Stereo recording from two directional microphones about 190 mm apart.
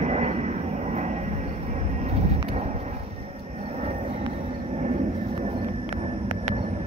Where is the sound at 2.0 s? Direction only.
35° right (ahead or behind).